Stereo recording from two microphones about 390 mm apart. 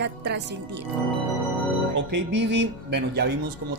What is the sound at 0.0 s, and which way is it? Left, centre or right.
Speech, right.